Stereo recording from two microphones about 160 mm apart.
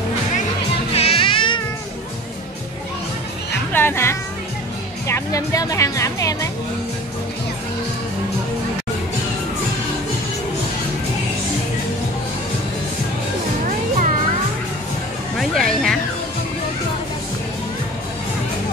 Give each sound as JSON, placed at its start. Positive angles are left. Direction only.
{"t": 0.9, "sound": "music", "side_deg": 35}
{"t": 3.7, "sound": "music", "side_deg": 15}
{"t": 5.0, "sound": "speech", "side_deg": 20}
{"t": 13.7, "sound": "music", "side_deg": -55}
{"t": 15.3, "sound": "music", "side_deg": 0}